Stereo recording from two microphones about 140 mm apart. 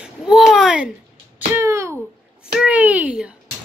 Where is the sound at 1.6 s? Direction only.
20° right (ahead or behind).